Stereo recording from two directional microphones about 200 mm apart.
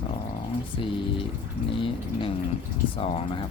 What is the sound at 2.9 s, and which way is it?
Speech, 30° left (ahead or behind).